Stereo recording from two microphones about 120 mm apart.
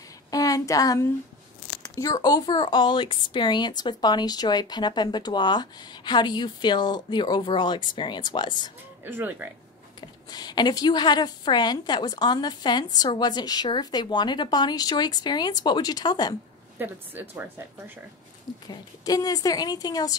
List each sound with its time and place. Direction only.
0.3 s a sound: 30° left (ahead or behind)
1.7 s speech: 30° left (ahead or behind)
9.0 s speech: 15° right (ahead or behind)
9.9 s speech: 35° left (ahead or behind)
16.7 s speech: 15° right (ahead or behind)
18.7 s speech: 30° left (ahead or behind)